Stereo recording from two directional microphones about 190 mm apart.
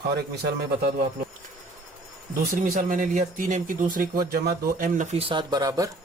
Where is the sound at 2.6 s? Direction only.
45° right (ahead or behind); by 5.9 s 20° right (ahead or behind).